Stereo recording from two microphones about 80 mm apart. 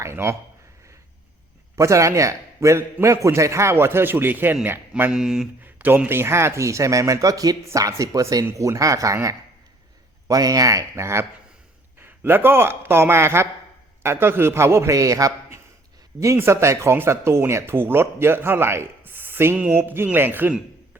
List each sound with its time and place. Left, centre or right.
0.0 s speech: right
1.7 s speech: right
5.1 s speech: centre
5.6 s speech: right
10.2 s speech: right